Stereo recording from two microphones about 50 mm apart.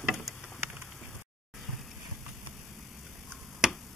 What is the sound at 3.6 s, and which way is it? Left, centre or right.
Tick-tock, centre.